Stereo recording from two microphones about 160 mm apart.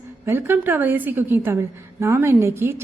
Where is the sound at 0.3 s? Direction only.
15° right (ahead or behind).